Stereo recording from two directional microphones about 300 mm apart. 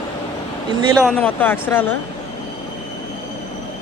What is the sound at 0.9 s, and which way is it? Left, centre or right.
Speech, centre.